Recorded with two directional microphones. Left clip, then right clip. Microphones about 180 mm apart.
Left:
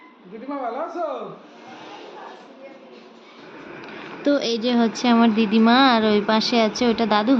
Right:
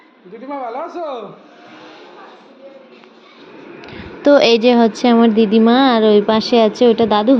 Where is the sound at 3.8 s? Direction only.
35° right (ahead or behind).